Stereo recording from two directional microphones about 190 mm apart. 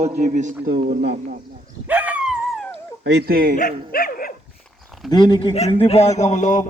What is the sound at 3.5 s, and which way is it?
Speech, 50° left (ahead or behind).